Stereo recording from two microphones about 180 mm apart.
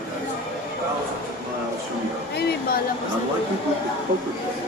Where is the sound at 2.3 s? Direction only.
60° left (ahead or behind).